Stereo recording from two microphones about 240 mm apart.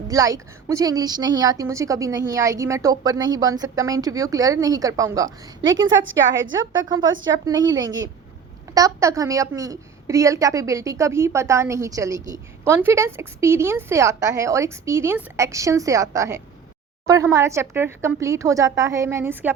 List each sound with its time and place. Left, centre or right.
0.1 s a woman's voice: centre
5.6 s a woman's voice: right
6.8 s a woman's voice: centre